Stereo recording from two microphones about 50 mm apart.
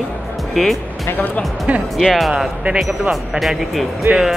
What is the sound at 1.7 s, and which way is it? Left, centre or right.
Speech, right.